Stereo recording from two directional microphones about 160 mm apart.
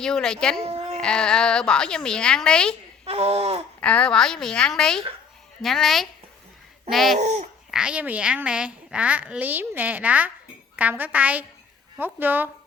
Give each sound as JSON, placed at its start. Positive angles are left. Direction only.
{"t": 0.0, "sound": "a woman's voice", "side_deg": 5}
{"t": 3.1, "sound": "speech", "side_deg": -40}
{"t": 3.8, "sound": "a woman's voice", "side_deg": 5}
{"t": 7.2, "sound": "speech", "side_deg": -45}
{"t": 7.7, "sound": "a woman's voice", "side_deg": -5}